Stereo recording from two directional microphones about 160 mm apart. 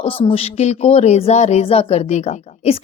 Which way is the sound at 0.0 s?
35° left (ahead or behind).